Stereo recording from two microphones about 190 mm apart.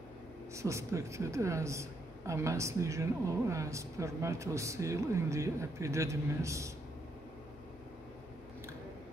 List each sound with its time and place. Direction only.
0.6 s a woman's voice: 15° right (ahead or behind)